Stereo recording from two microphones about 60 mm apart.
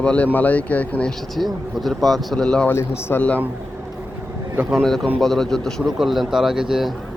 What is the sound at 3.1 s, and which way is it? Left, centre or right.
Speech, left.